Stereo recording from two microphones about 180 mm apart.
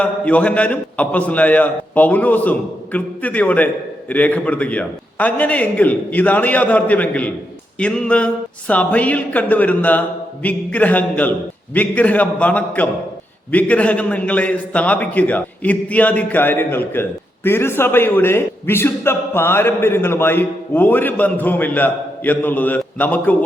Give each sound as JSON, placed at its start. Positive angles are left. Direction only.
{"t": 0.0, "sound": "a man's voice", "side_deg": 5}